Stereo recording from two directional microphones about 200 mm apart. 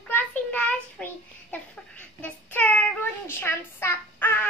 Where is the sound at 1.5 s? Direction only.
10° left (ahead or behind).